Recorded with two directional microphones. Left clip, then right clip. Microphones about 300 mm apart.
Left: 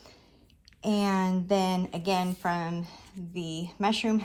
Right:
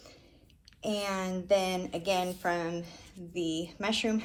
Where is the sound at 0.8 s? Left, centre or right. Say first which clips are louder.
Left 4 dB; centre.